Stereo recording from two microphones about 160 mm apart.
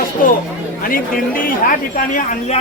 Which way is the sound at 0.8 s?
60° left (ahead or behind).